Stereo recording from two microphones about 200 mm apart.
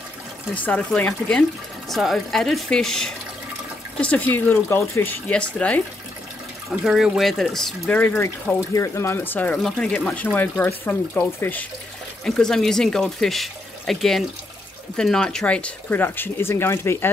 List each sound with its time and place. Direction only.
0.6 s speech: 5° left (ahead or behind)